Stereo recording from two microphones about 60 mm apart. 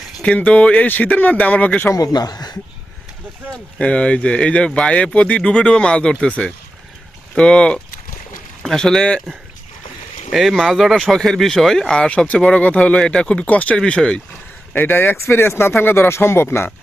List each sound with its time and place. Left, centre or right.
0.2 s speech: centre
1.9 s speech: left
3.5 s speech: centre
10.3 s speech: centre
14.8 s speech: left